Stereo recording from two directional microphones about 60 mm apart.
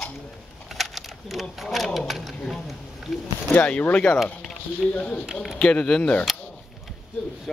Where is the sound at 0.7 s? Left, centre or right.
Centre.